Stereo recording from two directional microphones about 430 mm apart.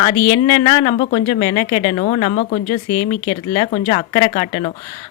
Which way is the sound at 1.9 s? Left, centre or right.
Centre.